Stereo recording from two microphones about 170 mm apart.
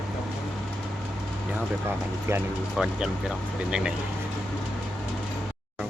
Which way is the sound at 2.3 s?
15° right (ahead or behind).